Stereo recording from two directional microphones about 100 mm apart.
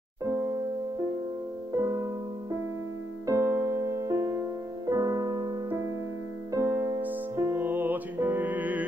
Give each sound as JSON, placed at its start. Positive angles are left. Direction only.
{"t": 0.2, "sound": "music", "side_deg": -30}
{"t": 3.3, "sound": "music", "side_deg": -30}